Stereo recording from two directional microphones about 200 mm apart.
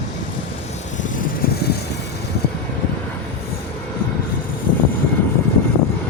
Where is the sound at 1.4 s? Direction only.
50° left (ahead or behind).